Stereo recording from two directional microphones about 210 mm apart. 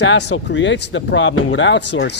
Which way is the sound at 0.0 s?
55° left (ahead or behind).